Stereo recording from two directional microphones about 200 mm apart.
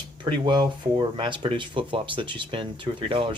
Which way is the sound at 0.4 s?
20° right (ahead or behind).